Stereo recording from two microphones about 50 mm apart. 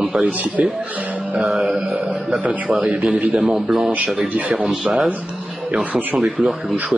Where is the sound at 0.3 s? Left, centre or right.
Right.